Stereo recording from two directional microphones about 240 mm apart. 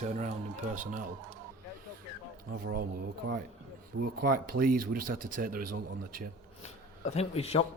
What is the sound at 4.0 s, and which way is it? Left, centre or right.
Speech, right.